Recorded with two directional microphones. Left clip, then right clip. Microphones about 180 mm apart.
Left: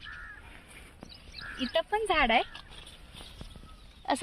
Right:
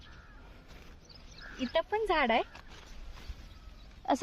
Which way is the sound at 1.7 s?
15° right (ahead or behind).